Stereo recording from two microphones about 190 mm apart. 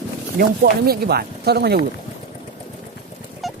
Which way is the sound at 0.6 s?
55° right (ahead or behind).